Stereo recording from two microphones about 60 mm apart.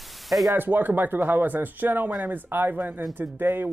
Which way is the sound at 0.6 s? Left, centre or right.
Right.